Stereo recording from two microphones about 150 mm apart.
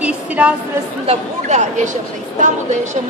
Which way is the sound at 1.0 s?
50° right (ahead or behind).